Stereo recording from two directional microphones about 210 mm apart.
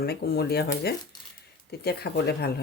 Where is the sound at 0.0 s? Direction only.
45° left (ahead or behind).